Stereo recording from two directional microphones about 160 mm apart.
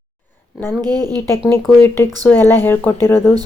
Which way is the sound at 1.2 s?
15° left (ahead or behind).